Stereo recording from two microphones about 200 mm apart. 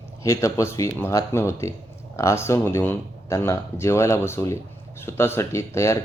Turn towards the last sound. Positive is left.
turn(degrees=15)  # may be behind; listen again after turning